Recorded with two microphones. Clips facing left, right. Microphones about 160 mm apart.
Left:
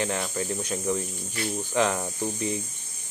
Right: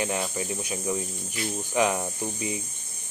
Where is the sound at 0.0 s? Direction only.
15° right (ahead or behind).